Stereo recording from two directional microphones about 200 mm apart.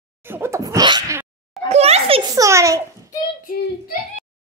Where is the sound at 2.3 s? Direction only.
15° right (ahead or behind).